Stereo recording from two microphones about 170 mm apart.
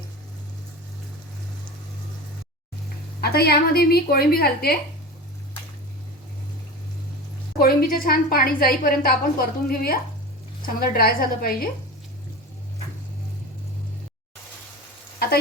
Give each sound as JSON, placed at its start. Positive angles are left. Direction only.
{"t": 3.2, "sound": "a woman's voice", "side_deg": 65}
{"t": 7.6, "sound": "a woman's voice", "side_deg": 60}